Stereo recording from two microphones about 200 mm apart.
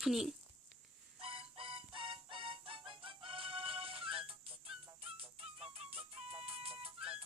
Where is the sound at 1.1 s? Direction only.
30° right (ahead or behind).